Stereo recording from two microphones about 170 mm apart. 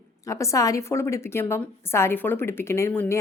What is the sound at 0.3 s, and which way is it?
A woman's voice, 20° left (ahead or behind).